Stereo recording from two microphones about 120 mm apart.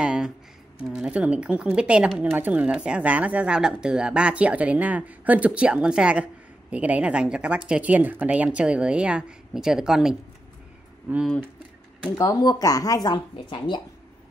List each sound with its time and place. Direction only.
0.0 s a sound: 5° right (ahead or behind)
0.8 s speech: 5° right (ahead or behind)
11.1 s speech: 15° right (ahead or behind)
12.2 s speech: 35° left (ahead or behind)